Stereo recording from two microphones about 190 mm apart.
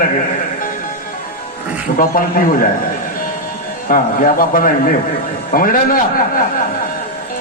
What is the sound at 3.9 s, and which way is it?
A man's voice, 45° left (ahead or behind).